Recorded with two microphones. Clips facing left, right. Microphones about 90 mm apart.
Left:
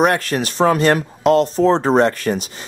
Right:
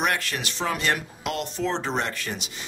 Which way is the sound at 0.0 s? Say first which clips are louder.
Left 10 dB; 40° left (ahead or behind).